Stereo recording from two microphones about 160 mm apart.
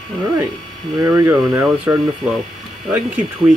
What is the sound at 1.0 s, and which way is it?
Speech, 15° right (ahead or behind).